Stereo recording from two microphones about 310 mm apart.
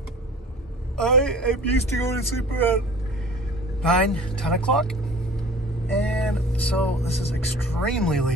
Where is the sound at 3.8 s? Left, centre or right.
Centre.